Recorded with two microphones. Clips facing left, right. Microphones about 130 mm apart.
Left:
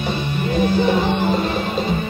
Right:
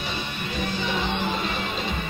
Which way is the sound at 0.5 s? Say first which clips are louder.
Left 11 dB; 50° left (ahead or behind).